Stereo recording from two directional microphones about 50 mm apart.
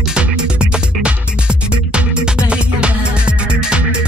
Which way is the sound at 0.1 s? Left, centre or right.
Right.